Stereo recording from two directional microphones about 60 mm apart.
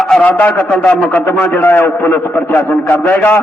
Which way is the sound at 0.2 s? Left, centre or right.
Left.